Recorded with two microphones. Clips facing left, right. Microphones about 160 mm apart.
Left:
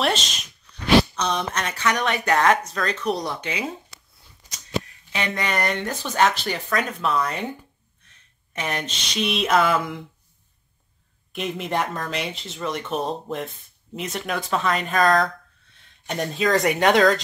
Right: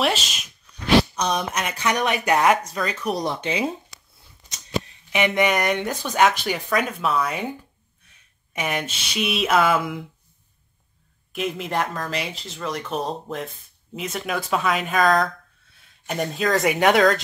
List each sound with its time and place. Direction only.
0.0 s a sound: 5° right (ahead or behind)
1.1 s speech: 15° right (ahead or behind)
3.3 s speech: 25° right (ahead or behind)
4.8 s speech: 15° right (ahead or behind)
8.5 s speech: 10° right (ahead or behind)
11.3 s speech: centre (ahead or behind)